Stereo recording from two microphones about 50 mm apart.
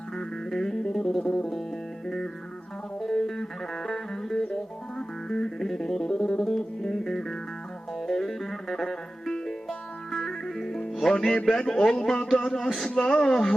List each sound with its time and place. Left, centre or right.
0.2 s music: centre
11.4 s a man's voice: centre
12.7 s speech: centre